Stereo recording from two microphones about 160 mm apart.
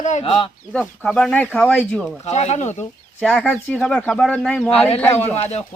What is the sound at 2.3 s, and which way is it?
Speech, 45° left (ahead or behind).